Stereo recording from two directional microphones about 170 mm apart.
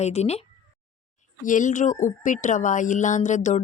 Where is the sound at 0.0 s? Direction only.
40° left (ahead or behind).